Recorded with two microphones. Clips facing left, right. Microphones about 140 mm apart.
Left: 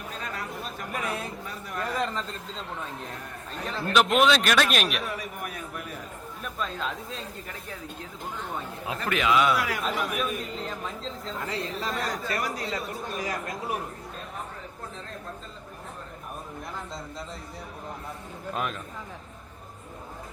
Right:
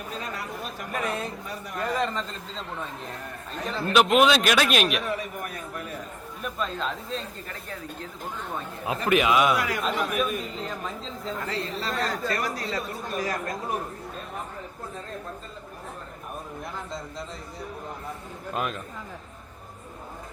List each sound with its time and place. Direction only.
0.9 s a man's voice: 5° left (ahead or behind)
3.7 s a man's voice: centre (ahead or behind)
6.4 s a man's voice: centre (ahead or behind)
8.9 s a man's voice: 15° right (ahead or behind)
9.6 s a man's voice: 5° left (ahead or behind)
11.4 s speech: 15° left (ahead or behind)
18.5 s a man's voice: centre (ahead or behind)